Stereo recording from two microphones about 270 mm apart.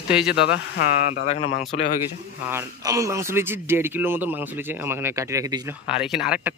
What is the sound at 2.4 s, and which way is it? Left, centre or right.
Speech, centre.